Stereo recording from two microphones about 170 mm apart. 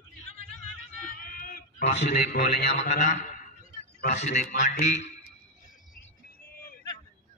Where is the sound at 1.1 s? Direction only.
60° left (ahead or behind).